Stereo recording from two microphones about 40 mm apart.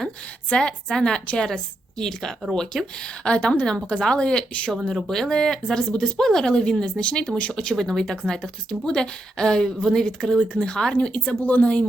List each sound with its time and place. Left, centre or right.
0.5 s speech: centre
4.9 s speech: centre; by 11.3 s left
11.3 s speech: left